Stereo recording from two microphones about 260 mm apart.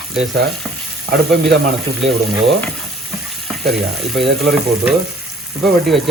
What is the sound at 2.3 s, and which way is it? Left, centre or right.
Speech, centre.